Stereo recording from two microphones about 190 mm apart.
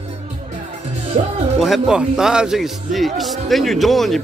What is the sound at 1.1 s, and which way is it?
Speech, 35° right (ahead or behind).